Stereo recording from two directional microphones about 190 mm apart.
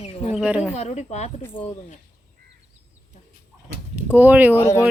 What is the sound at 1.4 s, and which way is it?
Speech, 10° left (ahead or behind).